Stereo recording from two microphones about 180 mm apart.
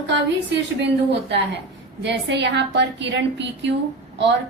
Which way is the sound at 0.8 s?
70° right (ahead or behind).